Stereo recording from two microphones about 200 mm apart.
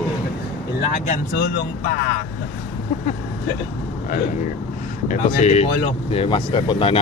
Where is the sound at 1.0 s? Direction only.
40° left (ahead or behind).